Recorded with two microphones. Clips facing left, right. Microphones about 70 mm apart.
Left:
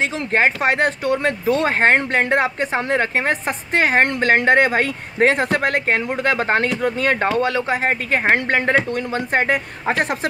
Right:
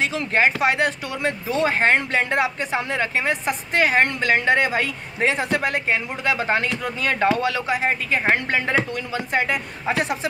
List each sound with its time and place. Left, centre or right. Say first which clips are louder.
0.0 s speech: left 2 dB; left